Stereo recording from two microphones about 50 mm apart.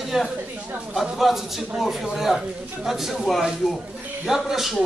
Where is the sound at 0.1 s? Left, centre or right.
Centre.